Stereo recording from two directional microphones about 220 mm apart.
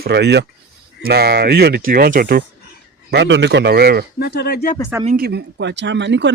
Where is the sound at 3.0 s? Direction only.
55° right (ahead or behind).